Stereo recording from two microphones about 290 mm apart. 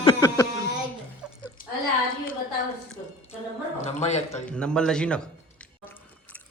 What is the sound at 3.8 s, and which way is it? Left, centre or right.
Speech, left.